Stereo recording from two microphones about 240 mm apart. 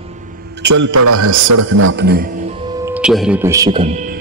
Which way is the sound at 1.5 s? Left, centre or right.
Right.